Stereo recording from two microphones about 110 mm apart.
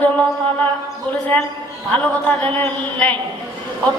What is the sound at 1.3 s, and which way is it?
Speech, 20° left (ahead or behind).